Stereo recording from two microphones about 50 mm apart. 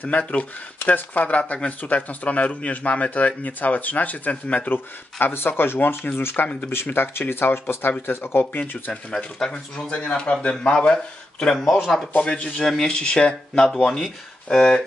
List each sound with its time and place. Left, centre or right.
0.1 s speech: left
4.7 s speech: left
9.1 s speech: centre
9.8 s speech: left
11.8 s speech: centre
12.2 s speech: left